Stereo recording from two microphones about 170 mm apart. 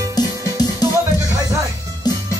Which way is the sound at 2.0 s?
25° left (ahead or behind).